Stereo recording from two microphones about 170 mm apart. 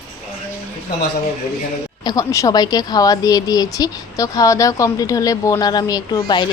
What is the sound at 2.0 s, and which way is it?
Speech, 20° left (ahead or behind).